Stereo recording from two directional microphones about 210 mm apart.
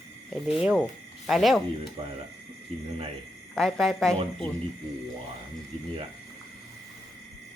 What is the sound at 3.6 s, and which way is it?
Speech, centre (ahead or behind).